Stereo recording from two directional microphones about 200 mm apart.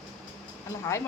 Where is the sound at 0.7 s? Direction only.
15° left (ahead or behind).